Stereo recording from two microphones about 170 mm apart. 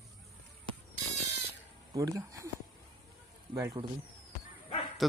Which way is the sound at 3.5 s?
20° right (ahead or behind).